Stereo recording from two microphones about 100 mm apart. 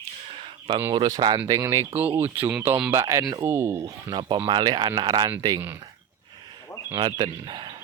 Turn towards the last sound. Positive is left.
turn(degrees=-50)  # may be behind; listen again after turning